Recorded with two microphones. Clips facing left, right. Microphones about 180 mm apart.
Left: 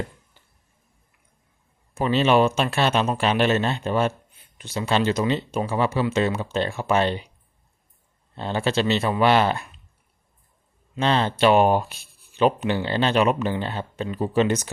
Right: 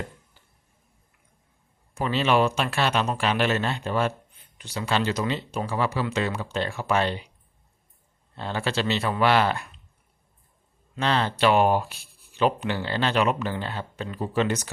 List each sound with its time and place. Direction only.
2.0 s speech: 20° left (ahead or behind)
8.4 s speech: 20° left (ahead or behind)
10.9 s speech: 20° left (ahead or behind)